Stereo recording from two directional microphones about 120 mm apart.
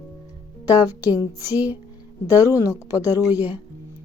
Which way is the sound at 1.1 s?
15° right (ahead or behind).